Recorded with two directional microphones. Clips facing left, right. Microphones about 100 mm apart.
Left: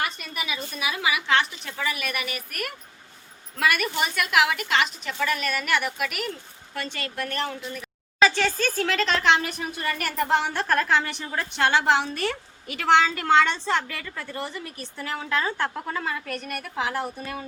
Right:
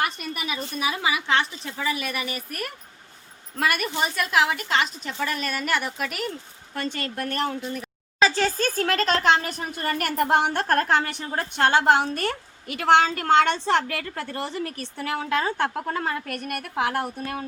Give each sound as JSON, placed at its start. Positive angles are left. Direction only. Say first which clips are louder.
{"t": 0.0, "sound": "a woman's voice", "louder": "right 2 dB", "side_deg": -45}
{"t": 3.6, "sound": "a woman's voice", "louder": "even", "side_deg": -40}